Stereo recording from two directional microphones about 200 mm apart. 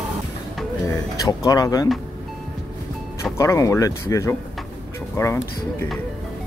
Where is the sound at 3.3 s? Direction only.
15° left (ahead or behind).